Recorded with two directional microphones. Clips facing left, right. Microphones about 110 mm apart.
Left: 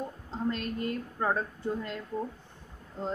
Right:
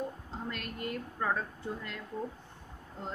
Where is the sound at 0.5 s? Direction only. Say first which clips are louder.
Left 7 dB; 30° left (ahead or behind).